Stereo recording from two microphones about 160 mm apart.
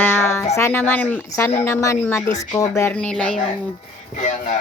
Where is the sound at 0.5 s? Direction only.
15° left (ahead or behind).